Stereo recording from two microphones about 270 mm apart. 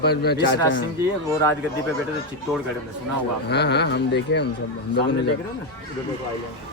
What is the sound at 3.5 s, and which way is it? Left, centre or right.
Speech, left.